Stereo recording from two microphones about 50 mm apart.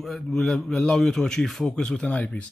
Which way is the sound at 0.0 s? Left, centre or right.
Centre.